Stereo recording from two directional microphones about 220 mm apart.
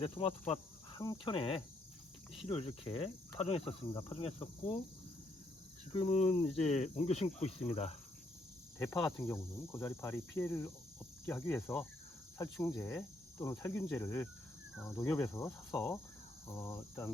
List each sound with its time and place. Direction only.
0.2 s speech: 25° left (ahead or behind)
6.0 s speech: 30° left (ahead or behind)
8.8 s speech: 10° left (ahead or behind)